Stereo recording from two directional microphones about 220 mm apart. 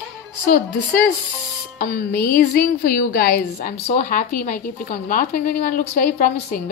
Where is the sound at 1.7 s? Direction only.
45° left (ahead or behind).